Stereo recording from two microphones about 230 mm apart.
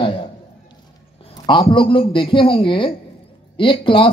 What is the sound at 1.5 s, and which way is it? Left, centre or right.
A man's voice, left.